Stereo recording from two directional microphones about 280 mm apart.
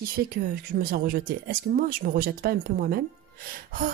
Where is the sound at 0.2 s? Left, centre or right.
Right.